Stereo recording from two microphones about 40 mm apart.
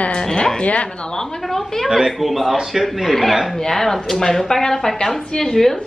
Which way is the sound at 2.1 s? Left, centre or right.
Centre.